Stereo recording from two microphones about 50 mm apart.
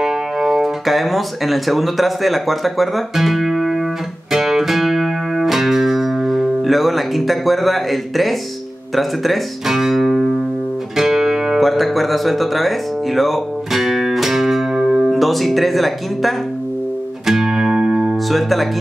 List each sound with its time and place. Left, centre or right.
0.0 s speech: centre
4.3 s music: centre
8.9 s speech: centre
11.0 s music: centre
11.6 s music: centre
15.0 s speech: centre
17.3 s music: centre
18.3 s speech: centre